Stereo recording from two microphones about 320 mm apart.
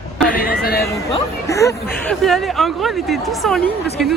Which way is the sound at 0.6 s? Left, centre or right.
Left.